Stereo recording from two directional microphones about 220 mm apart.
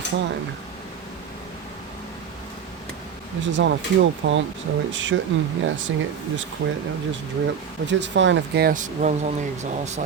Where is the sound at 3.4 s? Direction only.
55° right (ahead or behind).